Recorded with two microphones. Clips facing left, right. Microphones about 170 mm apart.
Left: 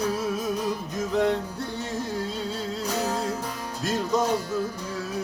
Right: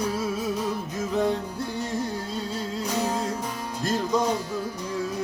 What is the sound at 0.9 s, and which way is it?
Music, centre (ahead or behind).